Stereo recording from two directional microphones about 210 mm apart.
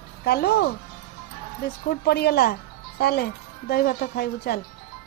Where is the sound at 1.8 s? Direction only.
50° left (ahead or behind).